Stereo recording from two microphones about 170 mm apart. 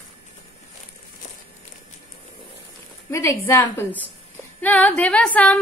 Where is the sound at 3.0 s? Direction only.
15° left (ahead or behind).